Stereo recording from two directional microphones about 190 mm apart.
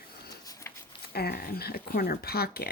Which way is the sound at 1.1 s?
55° left (ahead or behind).